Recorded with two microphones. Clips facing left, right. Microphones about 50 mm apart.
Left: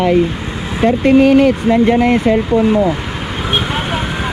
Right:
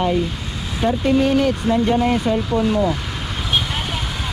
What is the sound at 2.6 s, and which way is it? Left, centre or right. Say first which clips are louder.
Speech: left 4 dB; left.